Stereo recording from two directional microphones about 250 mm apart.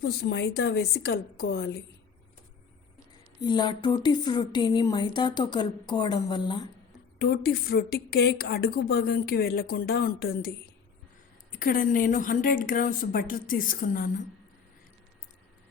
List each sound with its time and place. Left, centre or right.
0.0 s a woman's voice: left
3.4 s speech: centre
7.2 s a woman's voice: left
11.5 s a woman's voice: left